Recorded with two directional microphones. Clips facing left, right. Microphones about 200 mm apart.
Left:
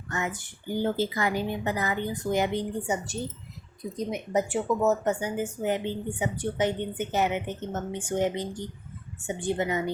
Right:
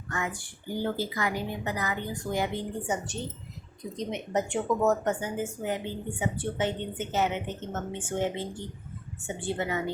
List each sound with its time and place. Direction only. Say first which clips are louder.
0.1 s a woman's voice: left 2 dB; 20° left (ahead or behind); by 5.1 s 5° left (ahead or behind)
5.2 s a woman's voice: left 3 dB; 20° left (ahead or behind)